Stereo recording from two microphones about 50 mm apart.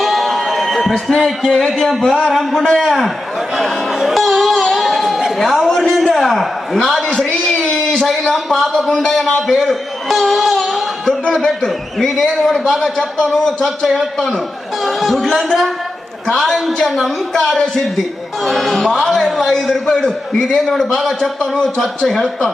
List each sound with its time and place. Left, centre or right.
0.0 s music: centre
1.1 s a man's voice: centre
2.4 s a man's voice: centre
2.6 s a man's voice: centre
3.5 s music: centre
6.1 s a man's voice: centre